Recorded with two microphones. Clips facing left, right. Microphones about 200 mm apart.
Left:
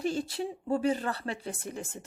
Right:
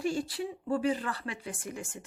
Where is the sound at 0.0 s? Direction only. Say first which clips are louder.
Left 1 dB; 25° left (ahead or behind).